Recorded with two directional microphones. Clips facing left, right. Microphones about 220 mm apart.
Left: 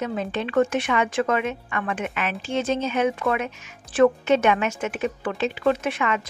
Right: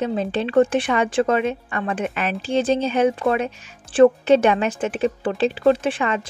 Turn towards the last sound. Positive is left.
turn(degrees=-30)  # may be behind; listen again after turning